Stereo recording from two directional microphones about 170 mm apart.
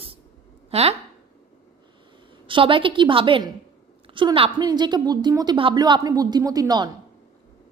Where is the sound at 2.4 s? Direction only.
30° right (ahead or behind).